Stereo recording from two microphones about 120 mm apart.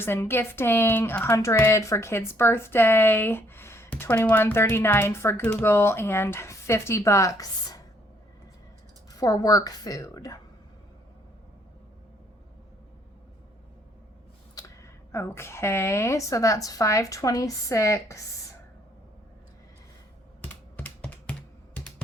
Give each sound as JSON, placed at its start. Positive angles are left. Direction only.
{"t": 0.0, "sound": "speech", "side_deg": 20}
{"t": 9.1, "sound": "a woman's voice", "side_deg": 30}
{"t": 15.1, "sound": "speech", "side_deg": 20}
{"t": 20.4, "sound": "computer keyboard", "side_deg": 15}